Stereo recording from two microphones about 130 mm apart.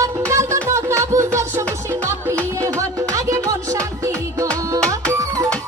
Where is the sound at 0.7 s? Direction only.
25° right (ahead or behind).